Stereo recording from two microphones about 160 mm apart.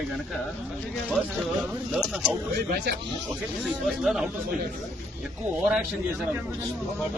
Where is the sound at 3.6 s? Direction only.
Centre (ahead or behind).